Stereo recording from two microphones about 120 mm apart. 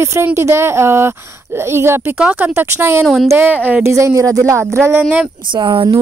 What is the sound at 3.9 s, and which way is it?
Speech, 25° right (ahead or behind).